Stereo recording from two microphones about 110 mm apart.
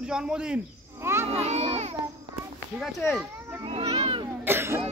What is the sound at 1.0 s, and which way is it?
Speech, 25° right (ahead or behind).